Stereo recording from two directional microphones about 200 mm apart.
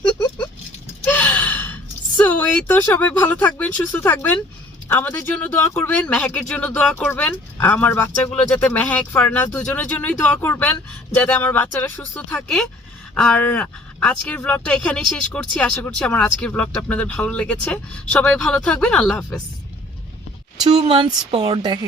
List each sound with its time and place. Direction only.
1.0 s gasp: 10° left (ahead or behind)
4.9 s speech: 10° left (ahead or behind)
20.7 s speech: 25° right (ahead or behind)